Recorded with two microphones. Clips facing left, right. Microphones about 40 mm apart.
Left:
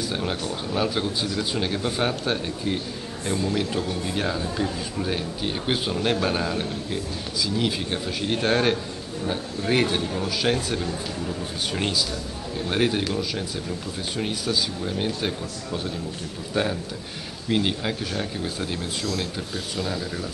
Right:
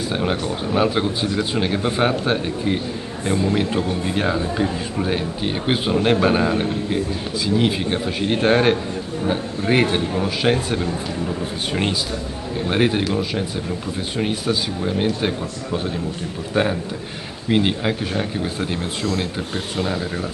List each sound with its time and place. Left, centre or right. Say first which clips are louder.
0.1 s a man's voice: right 5 dB; right
19.0 s speech: right 6 dB; right